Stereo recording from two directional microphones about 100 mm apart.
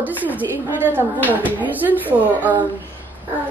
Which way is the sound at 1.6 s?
15° right (ahead or behind).